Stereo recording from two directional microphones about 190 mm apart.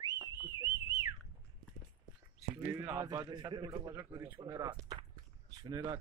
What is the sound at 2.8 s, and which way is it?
A man's voice, 15° right (ahead or behind).